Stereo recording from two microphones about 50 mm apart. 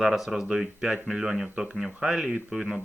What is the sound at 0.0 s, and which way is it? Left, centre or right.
Speech, centre.